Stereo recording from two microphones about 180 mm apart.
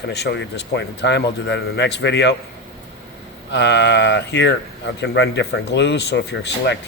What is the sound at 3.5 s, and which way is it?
Speech, 75° left (ahead or behind).